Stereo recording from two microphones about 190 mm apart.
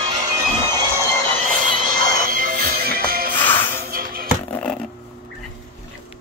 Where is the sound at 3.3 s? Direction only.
10° left (ahead or behind).